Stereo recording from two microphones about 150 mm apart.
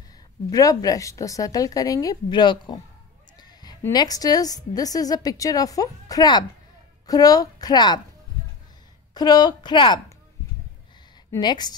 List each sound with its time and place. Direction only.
0.5 s a woman's voice: 25° left (ahead or behind)
3.3 s a sound: 25° left (ahead or behind)
3.9 s a woman's voice: 25° left (ahead or behind)
9.1 s a woman's voice: 25° left (ahead or behind)
11.3 s a woman's voice: 30° left (ahead or behind)